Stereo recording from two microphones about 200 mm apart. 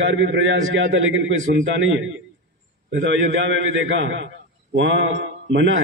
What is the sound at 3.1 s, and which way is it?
A man's voice, 70° right (ahead or behind).